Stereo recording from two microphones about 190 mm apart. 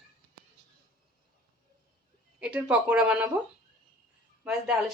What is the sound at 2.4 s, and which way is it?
Speech, 5° right (ahead or behind).